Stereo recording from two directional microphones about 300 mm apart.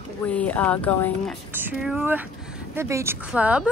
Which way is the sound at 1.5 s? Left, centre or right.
Centre.